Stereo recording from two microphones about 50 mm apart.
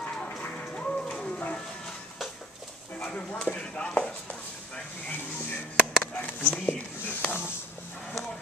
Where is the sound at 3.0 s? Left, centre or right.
Left.